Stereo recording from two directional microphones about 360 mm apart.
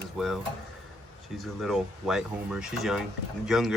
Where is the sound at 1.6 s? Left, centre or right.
Centre.